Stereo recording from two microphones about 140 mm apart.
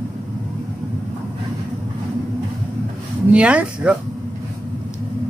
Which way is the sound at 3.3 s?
10° right (ahead or behind).